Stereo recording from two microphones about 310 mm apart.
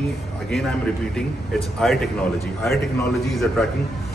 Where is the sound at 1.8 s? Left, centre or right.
Centre.